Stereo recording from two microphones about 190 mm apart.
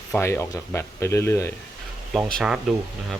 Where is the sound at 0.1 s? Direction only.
15° left (ahead or behind).